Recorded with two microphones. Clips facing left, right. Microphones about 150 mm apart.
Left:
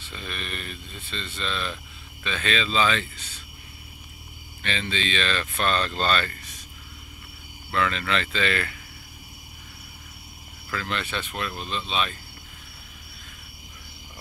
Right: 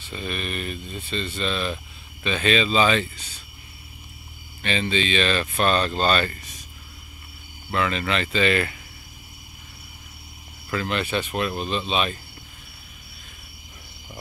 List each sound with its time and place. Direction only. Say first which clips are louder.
0.1 s speech: right 6 dB; 10° right (ahead or behind)
4.6 s speech: right 5 dB; 15° right (ahead or behind)
7.7 s speech: right 1 dB; 15° right (ahead or behind)
10.7 s speech: right 5 dB; 20° right (ahead or behind)